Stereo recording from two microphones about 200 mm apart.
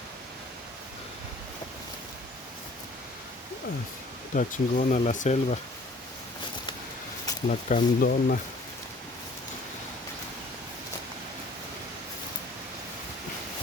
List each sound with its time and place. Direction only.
4.4 s speech: 40° left (ahead or behind)
7.4 s speech: 40° left (ahead or behind)